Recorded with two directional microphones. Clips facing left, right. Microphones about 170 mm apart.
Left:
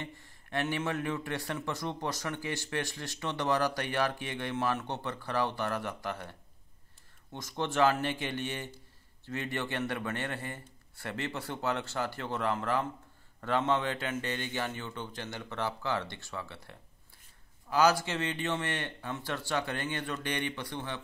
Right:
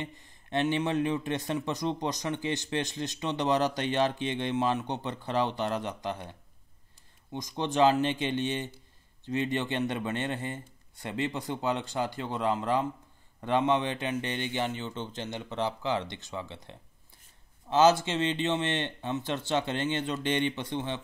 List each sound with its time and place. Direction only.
0.0 s speech: 20° right (ahead or behind)
7.3 s a man's voice: 15° right (ahead or behind)